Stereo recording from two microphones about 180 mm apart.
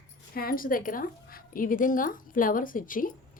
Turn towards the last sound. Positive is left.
turn(degrees=50)  # may be behind; listen again after turning